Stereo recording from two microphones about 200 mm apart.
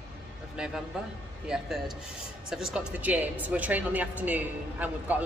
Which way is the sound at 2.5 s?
5° right (ahead or behind).